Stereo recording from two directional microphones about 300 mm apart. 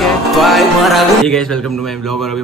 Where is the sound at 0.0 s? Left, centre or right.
Centre.